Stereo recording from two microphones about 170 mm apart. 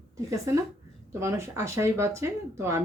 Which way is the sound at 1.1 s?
15° right (ahead or behind).